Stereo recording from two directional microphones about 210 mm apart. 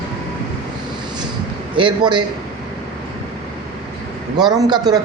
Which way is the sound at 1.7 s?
20° right (ahead or behind).